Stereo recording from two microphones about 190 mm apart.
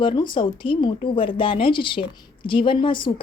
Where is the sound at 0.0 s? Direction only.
25° left (ahead or behind).